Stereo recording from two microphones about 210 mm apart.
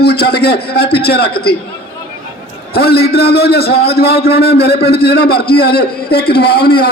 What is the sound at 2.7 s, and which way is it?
A man's voice, 50° left (ahead or behind).